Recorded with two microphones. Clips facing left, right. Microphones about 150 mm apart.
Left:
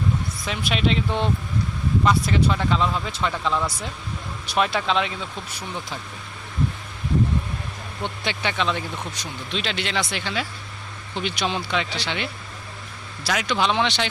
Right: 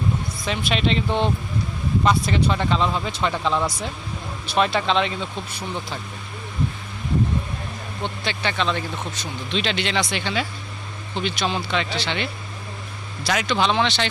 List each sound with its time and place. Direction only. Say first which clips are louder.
0.4 s speech: right 1 dB; 5° left (ahead or behind)
3.3 s speech: right 2 dB; 25° right (ahead or behind)
4.5 s speech: right 2 dB; 5° left (ahead or behind)
8.2 s speech: even; 15° left (ahead or behind)